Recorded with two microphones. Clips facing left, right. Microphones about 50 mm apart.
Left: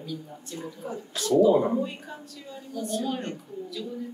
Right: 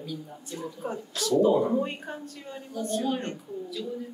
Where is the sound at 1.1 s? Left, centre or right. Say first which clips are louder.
Left 2 dB; left.